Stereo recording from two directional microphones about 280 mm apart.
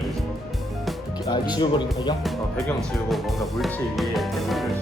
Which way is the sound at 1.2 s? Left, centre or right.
Centre.